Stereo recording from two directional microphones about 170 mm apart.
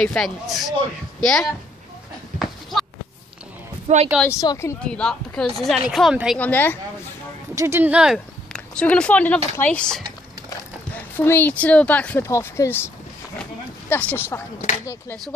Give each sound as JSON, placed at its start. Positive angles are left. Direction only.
{"t": 0.0, "sound": "speech", "side_deg": 5}
{"t": 2.3, "sound": "a sound", "side_deg": 0}
{"t": 3.8, "sound": "speech", "side_deg": -40}
{"t": 4.4, "sound": "speech", "side_deg": 20}
{"t": 4.8, "sound": "speech", "side_deg": 5}
{"t": 6.4, "sound": "speech", "side_deg": 10}
{"t": 7.5, "sound": "speech", "side_deg": -15}
{"t": 11.1, "sound": "speech", "side_deg": 10}
{"t": 13.4, "sound": "a sound", "side_deg": 10}